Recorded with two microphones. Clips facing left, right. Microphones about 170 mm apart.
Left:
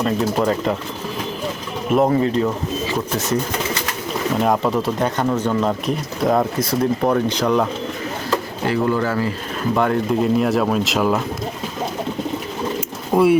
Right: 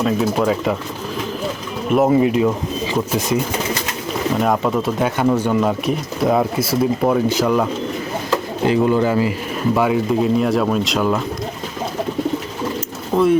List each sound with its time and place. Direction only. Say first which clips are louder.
0.0 s speech: right 1 dB; 5° right (ahead or behind)
1.9 s speech: right 2 dB; 5° right (ahead or behind)
4.4 s speech: even; centre (ahead or behind)
8.6 s speech: right 4 dB; 20° right (ahead or behind)
9.7 s speech: right 1 dB; 5° right (ahead or behind)
13.1 s speech: left 1 dB; 15° left (ahead or behind)